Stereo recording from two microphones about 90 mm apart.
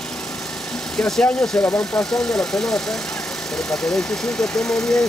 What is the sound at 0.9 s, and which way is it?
Speech, 5° left (ahead or behind).